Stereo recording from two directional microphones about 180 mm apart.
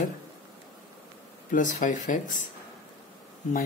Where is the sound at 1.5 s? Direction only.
45° left (ahead or behind).